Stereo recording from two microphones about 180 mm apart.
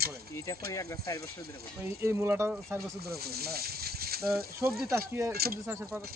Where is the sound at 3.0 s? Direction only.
60° right (ahead or behind).